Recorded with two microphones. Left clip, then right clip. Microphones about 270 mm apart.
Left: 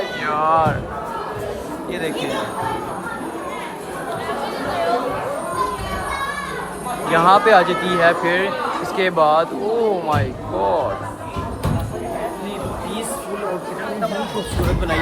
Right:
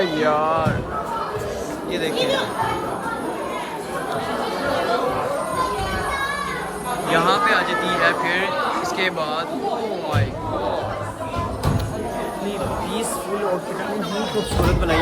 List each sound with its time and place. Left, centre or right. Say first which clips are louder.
0.3 s speech: left 6 dB; centre
2.0 s speech: right 3 dB; centre
7.1 s speech: left 6 dB; centre